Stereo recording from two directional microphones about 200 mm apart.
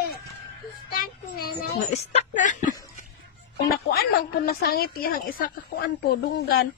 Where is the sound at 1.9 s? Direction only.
35° left (ahead or behind).